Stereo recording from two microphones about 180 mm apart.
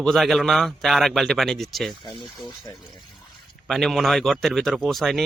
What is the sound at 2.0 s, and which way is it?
Speech, 25° left (ahead or behind).